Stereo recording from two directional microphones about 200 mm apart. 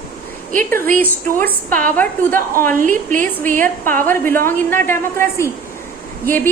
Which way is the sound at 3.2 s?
10° left (ahead or behind).